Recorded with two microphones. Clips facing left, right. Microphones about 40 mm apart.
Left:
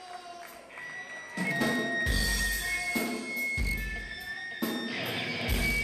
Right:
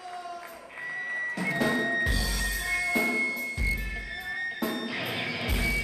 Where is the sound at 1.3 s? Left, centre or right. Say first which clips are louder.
Even; centre.